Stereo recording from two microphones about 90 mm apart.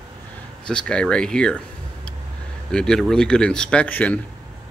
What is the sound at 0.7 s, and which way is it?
Speech, 10° left (ahead or behind).